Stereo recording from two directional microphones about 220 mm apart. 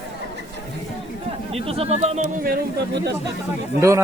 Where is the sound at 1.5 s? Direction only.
25° right (ahead or behind); by 3.1 s 45° right (ahead or behind).